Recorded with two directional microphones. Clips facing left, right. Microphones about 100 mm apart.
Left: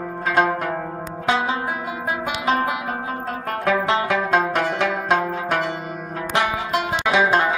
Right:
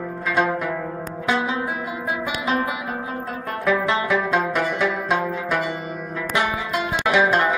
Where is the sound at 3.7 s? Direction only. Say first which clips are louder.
Even; 45° left (ahead or behind).